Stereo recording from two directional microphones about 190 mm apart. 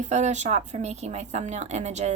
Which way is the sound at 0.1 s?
40° right (ahead or behind).